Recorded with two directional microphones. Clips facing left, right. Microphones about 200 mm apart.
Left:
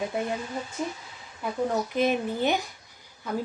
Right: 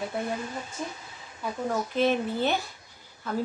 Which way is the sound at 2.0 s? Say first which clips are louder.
Right 1 dB; 15° left (ahead or behind).